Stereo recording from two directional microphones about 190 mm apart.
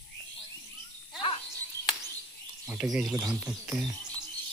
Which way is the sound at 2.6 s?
10° right (ahead or behind).